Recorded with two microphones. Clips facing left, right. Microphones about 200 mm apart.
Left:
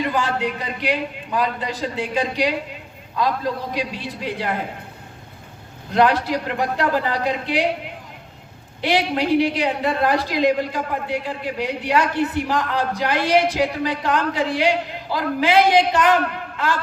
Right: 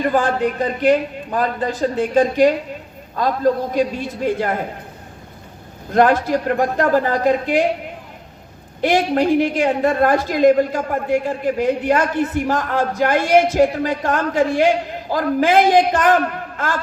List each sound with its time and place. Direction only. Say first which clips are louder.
0.0 s a woman's voice: right 5 dB; 50° right (ahead or behind)
5.9 s a woman's voice: right 3 dB; 45° right (ahead or behind)
8.8 s a woman's voice: right 4 dB; 45° right (ahead or behind)